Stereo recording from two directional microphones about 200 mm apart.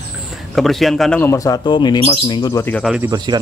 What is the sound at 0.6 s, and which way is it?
Speech, centre (ahead or behind).